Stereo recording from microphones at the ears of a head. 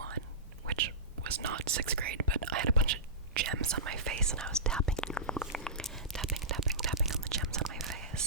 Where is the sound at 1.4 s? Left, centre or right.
Right.